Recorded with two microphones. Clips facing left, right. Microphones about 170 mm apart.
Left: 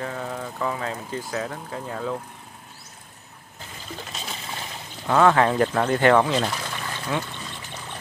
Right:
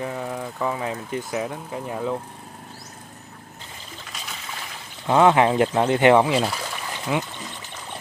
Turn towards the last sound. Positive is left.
turn(degrees=-15)  # may be behind; listen again after turning